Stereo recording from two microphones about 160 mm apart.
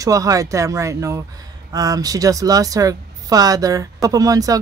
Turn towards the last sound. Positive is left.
turn(degrees=-20)  # may be behind; listen again after turning